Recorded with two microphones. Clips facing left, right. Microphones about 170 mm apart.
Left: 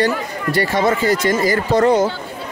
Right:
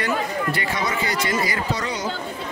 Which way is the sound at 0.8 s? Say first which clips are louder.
Left 9 dB; 50° left (ahead or behind).